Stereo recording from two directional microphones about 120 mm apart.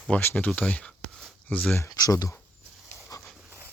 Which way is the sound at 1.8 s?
30° left (ahead or behind).